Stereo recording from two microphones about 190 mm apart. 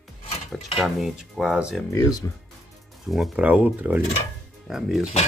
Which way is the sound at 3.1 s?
5° right (ahead or behind).